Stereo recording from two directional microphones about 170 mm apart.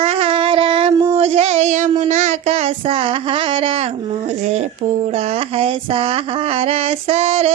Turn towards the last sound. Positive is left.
turn(degrees=-35)  # may be behind; listen again after turning